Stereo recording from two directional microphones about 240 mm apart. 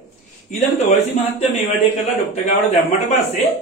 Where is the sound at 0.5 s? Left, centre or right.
Left.